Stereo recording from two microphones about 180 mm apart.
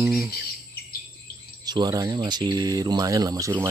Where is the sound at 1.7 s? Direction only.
20° right (ahead or behind).